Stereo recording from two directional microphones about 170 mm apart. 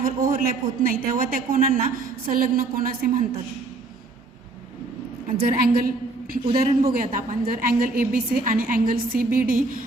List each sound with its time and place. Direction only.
0.0 s a man's voice: 55° right (ahead or behind)
5.4 s a woman's voice: 60° right (ahead or behind)